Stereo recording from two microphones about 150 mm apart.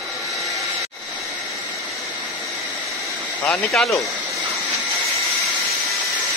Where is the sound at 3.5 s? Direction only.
Centre (ahead or behind).